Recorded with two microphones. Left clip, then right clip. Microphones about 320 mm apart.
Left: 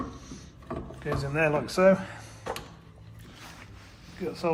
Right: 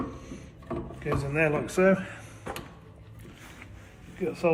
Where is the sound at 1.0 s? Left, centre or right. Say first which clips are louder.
Even; centre.